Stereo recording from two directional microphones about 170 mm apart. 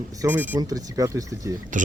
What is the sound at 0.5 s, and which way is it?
Speech, 20° right (ahead or behind).